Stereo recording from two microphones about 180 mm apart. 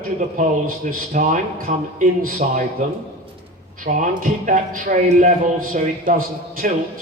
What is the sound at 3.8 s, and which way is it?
A man's voice, 45° right (ahead or behind).